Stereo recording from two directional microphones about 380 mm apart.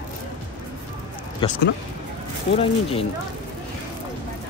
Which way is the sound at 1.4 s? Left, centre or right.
Centre.